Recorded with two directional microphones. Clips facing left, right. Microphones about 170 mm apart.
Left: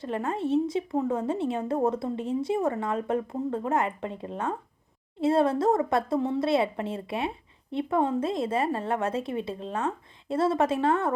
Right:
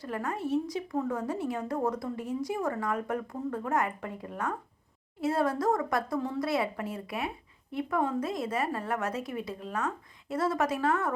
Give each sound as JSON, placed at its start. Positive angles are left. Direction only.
{"t": 0.0, "sound": "speech", "side_deg": 25}